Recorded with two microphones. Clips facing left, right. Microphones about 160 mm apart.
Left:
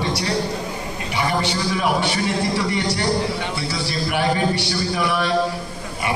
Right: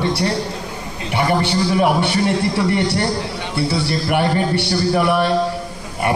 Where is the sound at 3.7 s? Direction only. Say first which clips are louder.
Right 5 dB; 60° right (ahead or behind).